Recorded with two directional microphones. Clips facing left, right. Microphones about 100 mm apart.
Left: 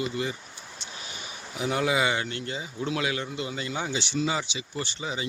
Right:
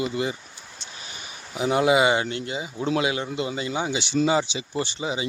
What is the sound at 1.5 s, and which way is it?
Speech, 25° right (ahead or behind).